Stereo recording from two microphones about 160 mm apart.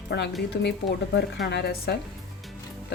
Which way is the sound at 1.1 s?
90° left.